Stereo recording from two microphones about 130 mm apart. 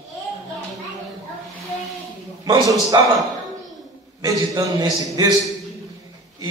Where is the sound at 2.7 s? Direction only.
25° right (ahead or behind).